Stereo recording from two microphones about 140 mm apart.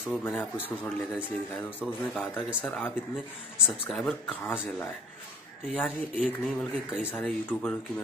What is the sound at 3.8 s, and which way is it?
Speech, 5° left (ahead or behind).